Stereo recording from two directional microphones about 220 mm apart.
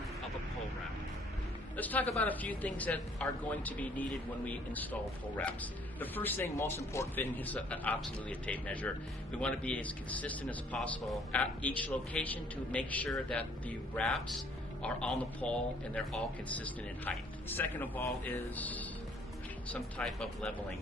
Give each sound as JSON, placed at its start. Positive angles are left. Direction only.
{"t": 1.7, "sound": "a man's voice", "side_deg": 5}
{"t": 6.0, "sound": "speech", "side_deg": 10}